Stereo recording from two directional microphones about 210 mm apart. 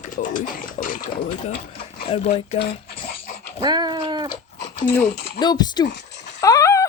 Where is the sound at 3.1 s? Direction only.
45° left (ahead or behind).